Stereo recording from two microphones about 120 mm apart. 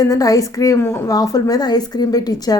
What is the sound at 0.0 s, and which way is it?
A woman's voice, 30° left (ahead or behind).